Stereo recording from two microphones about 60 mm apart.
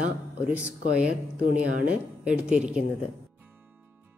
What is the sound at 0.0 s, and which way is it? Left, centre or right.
Speech, right.